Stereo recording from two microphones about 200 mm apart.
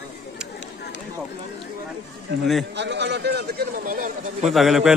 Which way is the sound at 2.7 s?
60° right (ahead or behind).